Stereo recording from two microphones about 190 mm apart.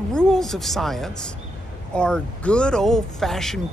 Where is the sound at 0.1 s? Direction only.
5° left (ahead or behind).